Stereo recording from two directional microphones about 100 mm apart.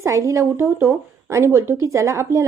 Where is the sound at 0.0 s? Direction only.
30° right (ahead or behind).